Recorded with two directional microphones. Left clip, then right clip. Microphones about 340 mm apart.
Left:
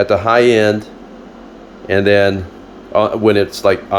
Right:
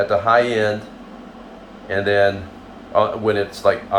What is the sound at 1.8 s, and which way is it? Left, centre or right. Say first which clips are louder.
Speech: left 5 dB; left.